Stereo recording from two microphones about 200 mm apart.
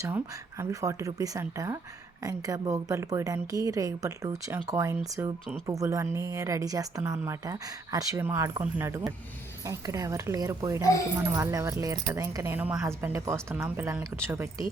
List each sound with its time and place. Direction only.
0.6 s a woman's voice: 15° right (ahead or behind)